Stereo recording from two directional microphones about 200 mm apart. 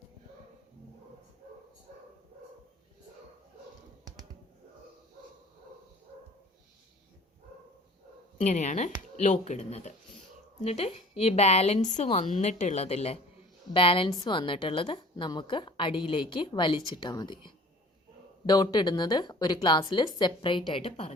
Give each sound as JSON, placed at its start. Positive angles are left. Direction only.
{"t": 8.4, "sound": "a woman's voice", "side_deg": 35}